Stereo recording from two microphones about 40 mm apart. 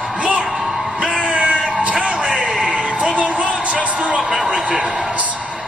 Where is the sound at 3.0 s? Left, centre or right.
Right.